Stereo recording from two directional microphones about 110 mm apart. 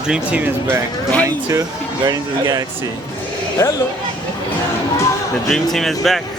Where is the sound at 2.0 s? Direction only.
35° right (ahead or behind).